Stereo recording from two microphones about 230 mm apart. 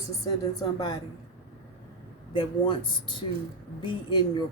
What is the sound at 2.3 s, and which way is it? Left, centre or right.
Speech, left.